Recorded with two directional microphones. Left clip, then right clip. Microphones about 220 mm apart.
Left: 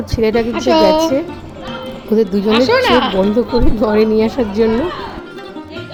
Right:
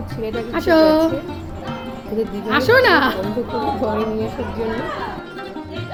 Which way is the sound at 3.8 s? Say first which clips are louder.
Left 8 dB; 35° left (ahead or behind).